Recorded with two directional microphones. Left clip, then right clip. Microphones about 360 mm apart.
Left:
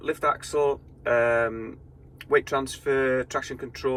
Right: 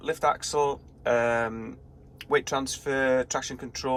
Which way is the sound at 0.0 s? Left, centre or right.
Centre.